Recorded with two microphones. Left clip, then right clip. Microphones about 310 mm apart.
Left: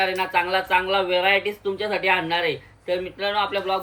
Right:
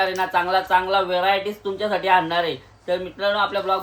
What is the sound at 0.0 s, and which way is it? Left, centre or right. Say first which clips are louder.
Speech: right 1 dB; centre.